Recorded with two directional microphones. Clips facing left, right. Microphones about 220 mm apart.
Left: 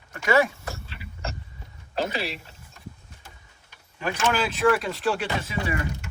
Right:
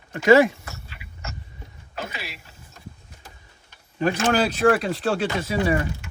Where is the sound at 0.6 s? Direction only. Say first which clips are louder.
Left 4 dB; 30° left (ahead or behind).